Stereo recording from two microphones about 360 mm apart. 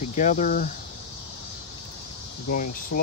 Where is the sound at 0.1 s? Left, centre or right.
Left.